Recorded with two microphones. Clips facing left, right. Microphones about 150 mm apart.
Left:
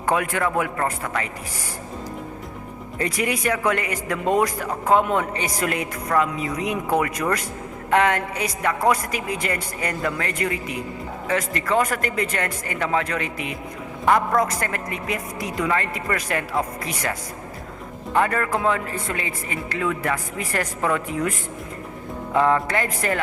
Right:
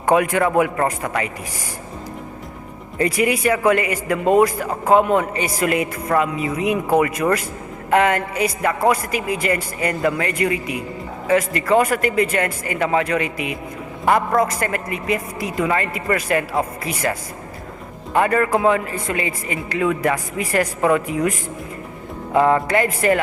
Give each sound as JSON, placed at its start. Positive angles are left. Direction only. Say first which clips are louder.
{"t": 0.0, "sound": "a man's voice", "louder": "right 6 dB", "side_deg": -20}
{"t": 3.0, "sound": "a man's voice", "louder": "right 6 dB", "side_deg": -5}
{"t": 22.6, "sound": "speech", "louder": "right 6 dB", "side_deg": -10}